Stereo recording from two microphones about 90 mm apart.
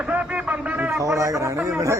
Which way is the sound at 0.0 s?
15° right (ahead or behind).